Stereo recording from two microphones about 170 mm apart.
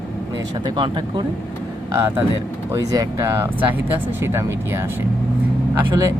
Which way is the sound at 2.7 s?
20° right (ahead or behind).